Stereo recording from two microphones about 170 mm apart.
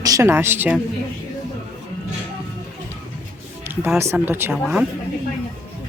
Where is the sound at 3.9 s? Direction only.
15° right (ahead or behind).